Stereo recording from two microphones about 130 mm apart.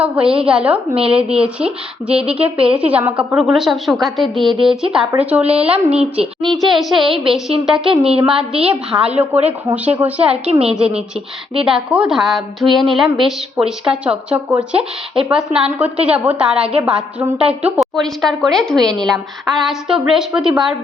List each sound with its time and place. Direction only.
0.0 s a woman's voice: 5° right (ahead or behind)
2.4 s a woman's voice: 45° right (ahead or behind)
2.7 s a woman's voice: 10° right (ahead or behind)